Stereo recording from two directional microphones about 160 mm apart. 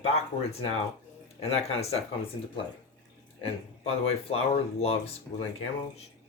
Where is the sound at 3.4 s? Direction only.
40° left (ahead or behind).